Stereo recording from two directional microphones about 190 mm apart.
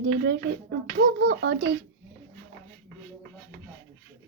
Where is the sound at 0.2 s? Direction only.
60° right (ahead or behind).